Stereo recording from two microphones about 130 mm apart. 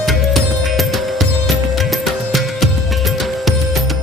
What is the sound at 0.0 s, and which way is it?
Music, centre (ahead or behind).